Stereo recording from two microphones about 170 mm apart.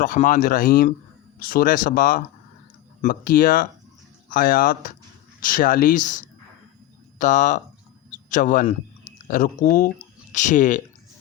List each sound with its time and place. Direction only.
0.0 s speech: 50° left (ahead or behind)